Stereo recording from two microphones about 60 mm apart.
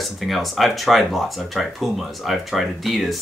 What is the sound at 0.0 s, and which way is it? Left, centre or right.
Speech, centre.